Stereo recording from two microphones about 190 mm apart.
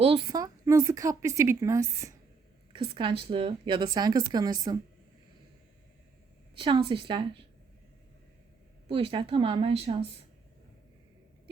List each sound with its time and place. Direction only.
0.0 s speech: 30° right (ahead or behind)
2.7 s a woman's voice: 25° right (ahead or behind)
6.6 s a woman's voice: 25° right (ahead or behind)
8.9 s a woman's voice: 30° right (ahead or behind)